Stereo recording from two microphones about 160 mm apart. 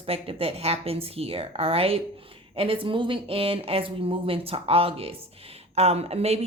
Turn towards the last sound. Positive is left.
turn(degrees=-40)  # may be behind; listen again after turning